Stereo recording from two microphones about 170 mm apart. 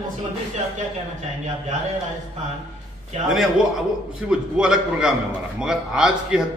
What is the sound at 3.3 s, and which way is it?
A man's voice, centre (ahead or behind).